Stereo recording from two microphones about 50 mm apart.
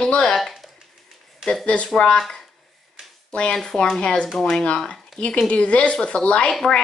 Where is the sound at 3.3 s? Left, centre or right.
Centre.